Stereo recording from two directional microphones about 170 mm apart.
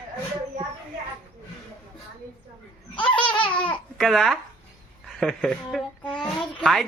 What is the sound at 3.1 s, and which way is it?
Baby laughter, 30° left (ahead or behind).